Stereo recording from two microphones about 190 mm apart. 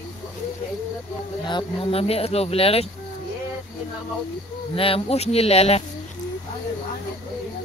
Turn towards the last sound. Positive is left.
turn(degrees=30)  # may be behind; listen again after turning